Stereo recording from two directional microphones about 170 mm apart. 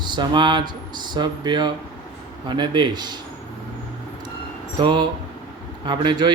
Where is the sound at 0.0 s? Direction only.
25° right (ahead or behind).